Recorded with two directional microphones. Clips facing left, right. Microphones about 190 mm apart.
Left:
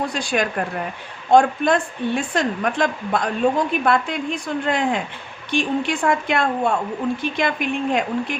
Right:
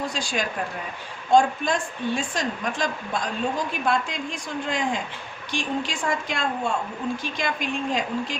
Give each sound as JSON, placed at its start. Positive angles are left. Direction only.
{"t": 0.1, "sound": "a woman's voice", "side_deg": 60}